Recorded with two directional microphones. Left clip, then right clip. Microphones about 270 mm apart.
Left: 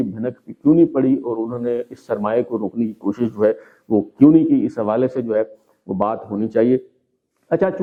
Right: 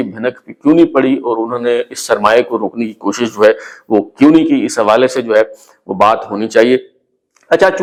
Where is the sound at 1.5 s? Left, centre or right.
Centre.